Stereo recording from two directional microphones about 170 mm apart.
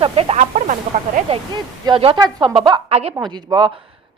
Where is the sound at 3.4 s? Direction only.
25° right (ahead or behind).